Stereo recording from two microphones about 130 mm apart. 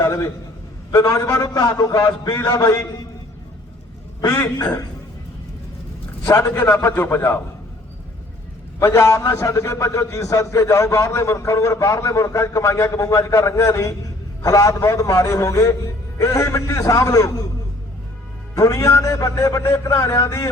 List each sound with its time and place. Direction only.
0.0 s a sound: 20° left (ahead or behind)
0.9 s a man's voice: 20° left (ahead or behind)
4.3 s a man's voice: 25° left (ahead or behind)
6.2 s a man's voice: 20° left (ahead or behind)
8.8 s a man's voice: 20° left (ahead or behind)
18.5 s a man's voice: 25° left (ahead or behind)